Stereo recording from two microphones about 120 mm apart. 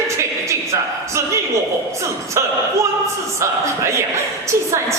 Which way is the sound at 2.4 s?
25° right (ahead or behind).